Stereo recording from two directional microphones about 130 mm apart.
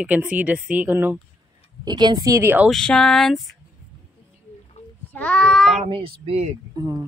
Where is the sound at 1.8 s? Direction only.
35° right (ahead or behind); by 2.6 s 20° right (ahead or behind).